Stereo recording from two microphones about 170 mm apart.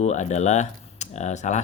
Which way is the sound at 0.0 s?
45° left (ahead or behind).